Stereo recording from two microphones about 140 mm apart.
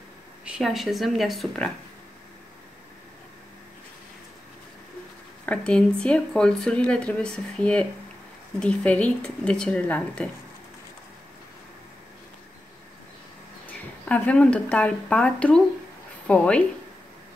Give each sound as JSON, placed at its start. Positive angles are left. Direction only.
{"t": 0.5, "sound": "speech", "side_deg": 0}
{"t": 5.4, "sound": "speech", "side_deg": 10}
{"t": 13.7, "sound": "speech", "side_deg": 10}